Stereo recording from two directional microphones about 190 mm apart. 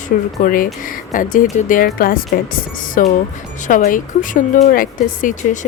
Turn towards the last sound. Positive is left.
turn(degrees=40)  # may be behind; listen again after turning